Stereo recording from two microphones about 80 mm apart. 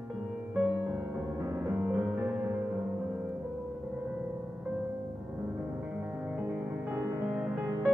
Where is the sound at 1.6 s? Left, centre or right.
Right.